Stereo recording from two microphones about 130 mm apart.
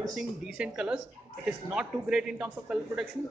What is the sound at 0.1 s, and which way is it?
A woman's voice, 5° right (ahead or behind).